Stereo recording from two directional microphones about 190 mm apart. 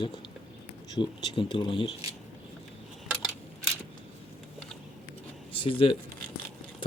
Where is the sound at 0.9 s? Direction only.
20° left (ahead or behind).